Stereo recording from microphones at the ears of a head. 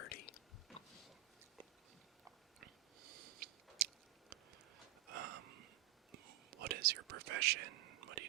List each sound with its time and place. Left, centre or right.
0.0 s whispering: left
2.6 s chewing: right
5.0 s a sound: right
6.1 s whispering: right